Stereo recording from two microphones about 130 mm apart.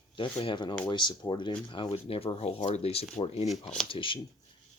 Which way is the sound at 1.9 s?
50° left (ahead or behind).